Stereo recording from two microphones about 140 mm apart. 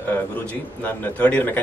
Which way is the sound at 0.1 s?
15° left (ahead or behind).